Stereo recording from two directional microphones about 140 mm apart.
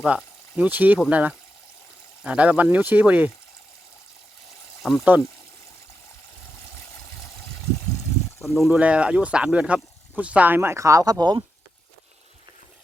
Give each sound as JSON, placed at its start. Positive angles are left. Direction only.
{"t": 0.0, "sound": "speech", "side_deg": -5}
{"t": 4.8, "sound": "speech", "side_deg": 0}
{"t": 8.5, "sound": "speech", "side_deg": 0}